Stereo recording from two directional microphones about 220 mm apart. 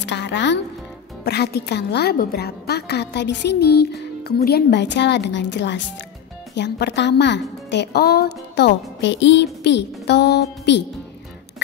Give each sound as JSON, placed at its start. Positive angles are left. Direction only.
{"t": 0.0, "sound": "a woman's voice", "side_deg": 50}